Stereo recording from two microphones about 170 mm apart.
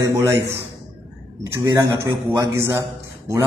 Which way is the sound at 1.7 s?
15° right (ahead or behind).